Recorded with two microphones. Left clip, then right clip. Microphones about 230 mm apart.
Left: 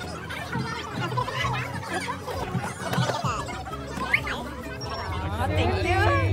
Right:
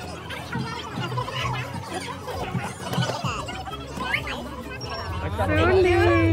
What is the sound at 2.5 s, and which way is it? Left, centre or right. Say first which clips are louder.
Squeal: even; centre.